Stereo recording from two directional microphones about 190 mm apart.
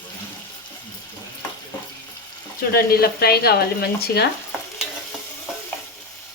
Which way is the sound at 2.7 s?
55° left (ahead or behind).